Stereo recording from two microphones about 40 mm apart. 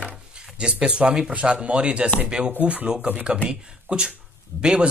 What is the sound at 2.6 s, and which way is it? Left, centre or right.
Speech, right.